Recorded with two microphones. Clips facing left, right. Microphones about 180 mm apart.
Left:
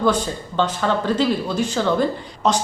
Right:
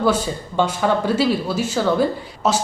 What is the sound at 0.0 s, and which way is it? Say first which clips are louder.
Speech: right 1 dB; 5° right (ahead or behind).